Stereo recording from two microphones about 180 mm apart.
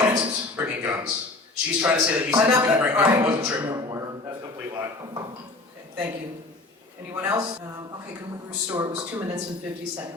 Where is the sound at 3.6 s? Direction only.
25° right (ahead or behind).